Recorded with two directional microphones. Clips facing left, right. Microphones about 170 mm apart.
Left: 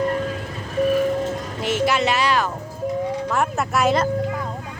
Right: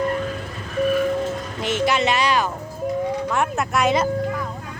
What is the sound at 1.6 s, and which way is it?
Speech, 5° left (ahead or behind).